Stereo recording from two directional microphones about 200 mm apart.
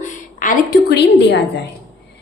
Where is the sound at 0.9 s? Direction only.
60° left (ahead or behind).